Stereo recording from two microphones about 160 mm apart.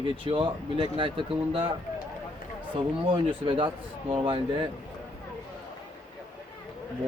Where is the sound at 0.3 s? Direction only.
30° right (ahead or behind).